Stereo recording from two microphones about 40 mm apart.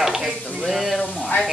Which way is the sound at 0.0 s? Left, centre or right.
Centre.